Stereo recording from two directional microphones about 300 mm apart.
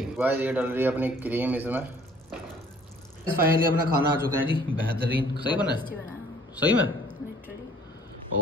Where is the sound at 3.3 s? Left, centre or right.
Right.